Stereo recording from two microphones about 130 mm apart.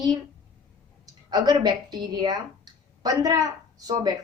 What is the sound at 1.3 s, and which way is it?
A woman's voice, 30° right (ahead or behind).